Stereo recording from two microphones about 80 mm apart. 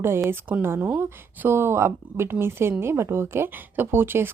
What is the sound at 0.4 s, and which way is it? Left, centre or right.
Speech, right.